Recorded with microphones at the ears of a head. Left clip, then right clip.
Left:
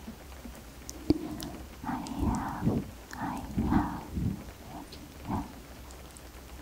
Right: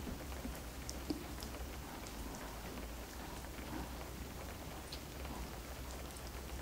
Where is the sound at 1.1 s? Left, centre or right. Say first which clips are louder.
Left 16 dB; left.